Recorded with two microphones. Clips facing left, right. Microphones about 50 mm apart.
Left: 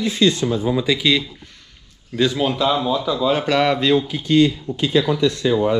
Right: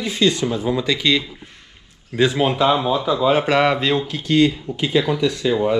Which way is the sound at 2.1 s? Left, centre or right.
Right.